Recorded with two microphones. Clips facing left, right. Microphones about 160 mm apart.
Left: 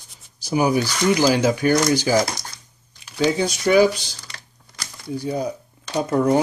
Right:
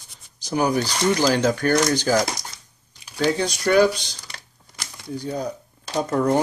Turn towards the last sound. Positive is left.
turn(degrees=5)  # may be behind; listen again after turning